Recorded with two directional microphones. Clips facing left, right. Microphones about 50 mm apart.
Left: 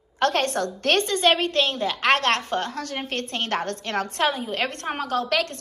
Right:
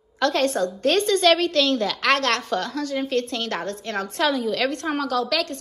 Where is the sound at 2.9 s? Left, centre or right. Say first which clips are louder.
Right 6 dB; left.